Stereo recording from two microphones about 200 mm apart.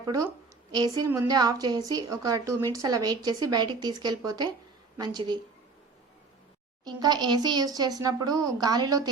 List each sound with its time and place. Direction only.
0.0 s a woman's voice: 15° right (ahead or behind)
6.8 s speech: 20° right (ahead or behind)